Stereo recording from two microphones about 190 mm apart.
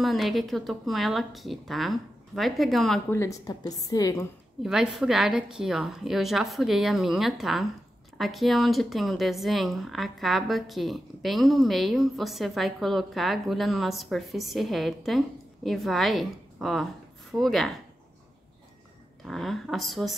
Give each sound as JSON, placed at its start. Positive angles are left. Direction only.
{"t": 0.0, "sound": "a woman's voice", "side_deg": 0}
{"t": 3.1, "sound": "a woman's voice", "side_deg": 15}
{"t": 4.6, "sound": "a woman's voice", "side_deg": 0}
{"t": 19.2, "sound": "a woman's voice", "side_deg": 0}